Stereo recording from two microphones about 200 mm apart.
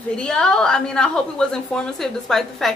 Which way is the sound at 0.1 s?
5° left (ahead or behind).